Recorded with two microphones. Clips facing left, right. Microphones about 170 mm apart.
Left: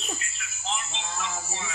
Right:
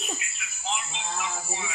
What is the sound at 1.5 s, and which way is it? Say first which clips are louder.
Speech: right 1 dB; 10° right (ahead or behind).